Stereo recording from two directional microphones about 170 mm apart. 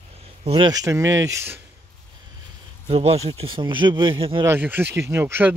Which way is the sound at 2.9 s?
35° right (ahead or behind).